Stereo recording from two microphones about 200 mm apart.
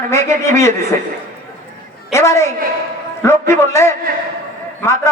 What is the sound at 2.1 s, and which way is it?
A man's voice, 15° left (ahead or behind).